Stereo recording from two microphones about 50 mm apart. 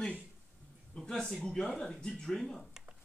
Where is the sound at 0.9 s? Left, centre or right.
Centre.